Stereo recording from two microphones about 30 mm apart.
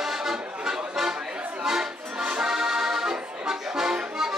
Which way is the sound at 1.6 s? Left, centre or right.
Centre.